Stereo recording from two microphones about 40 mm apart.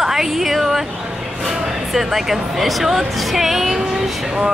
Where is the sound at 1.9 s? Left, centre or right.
Centre.